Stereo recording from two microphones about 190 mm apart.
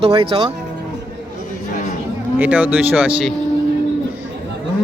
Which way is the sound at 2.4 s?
10° right (ahead or behind).